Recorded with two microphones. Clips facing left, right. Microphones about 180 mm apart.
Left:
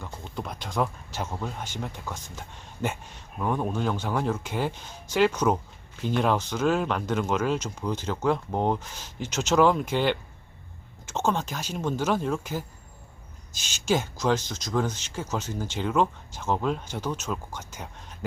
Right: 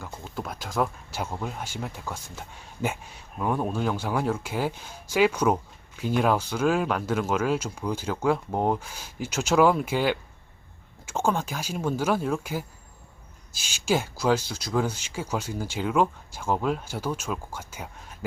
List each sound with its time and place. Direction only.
0.0 s speech: 5° right (ahead or behind)